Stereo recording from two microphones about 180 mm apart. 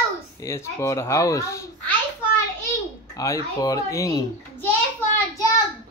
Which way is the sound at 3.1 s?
20° left (ahead or behind).